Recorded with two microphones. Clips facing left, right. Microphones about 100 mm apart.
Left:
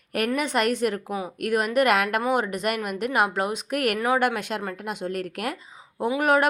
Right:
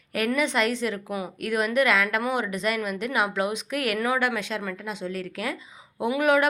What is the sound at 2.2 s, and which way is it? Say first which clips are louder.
Speech: left 2 dB; 40° left (ahead or behind).